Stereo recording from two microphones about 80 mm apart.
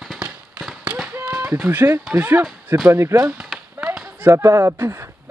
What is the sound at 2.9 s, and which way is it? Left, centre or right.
Speech, right.